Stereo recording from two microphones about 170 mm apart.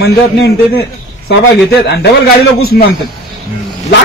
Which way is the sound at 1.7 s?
90° left.